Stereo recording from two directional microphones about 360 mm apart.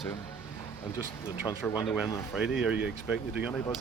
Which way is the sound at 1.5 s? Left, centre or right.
Centre.